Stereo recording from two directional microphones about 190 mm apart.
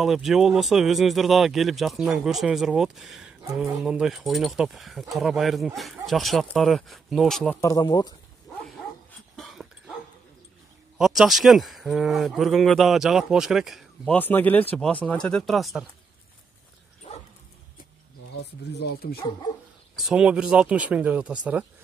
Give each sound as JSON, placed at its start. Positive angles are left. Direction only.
{"t": 0.0, "sound": "speech", "side_deg": 0}
{"t": 7.6, "sound": "speech", "side_deg": 20}
{"t": 9.4, "sound": "dog", "side_deg": 0}
{"t": 11.0, "sound": "speech", "side_deg": 0}
{"t": 18.3, "sound": "speech", "side_deg": 65}
{"t": 20.0, "sound": "speech", "side_deg": 0}